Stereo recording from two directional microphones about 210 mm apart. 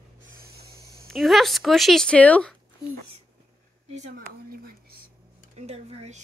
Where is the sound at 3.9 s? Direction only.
30° right (ahead or behind).